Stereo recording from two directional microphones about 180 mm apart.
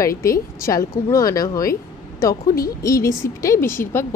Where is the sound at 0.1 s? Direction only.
55° left (ahead or behind).